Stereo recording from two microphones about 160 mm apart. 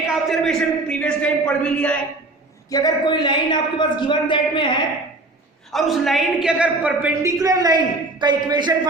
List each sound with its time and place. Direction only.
0.3 s a man's voice: centre (ahead or behind)
2.6 s a man's voice: 25° left (ahead or behind)
5.7 s a woman's voice: centre (ahead or behind); by 8.9 s 25° right (ahead or behind)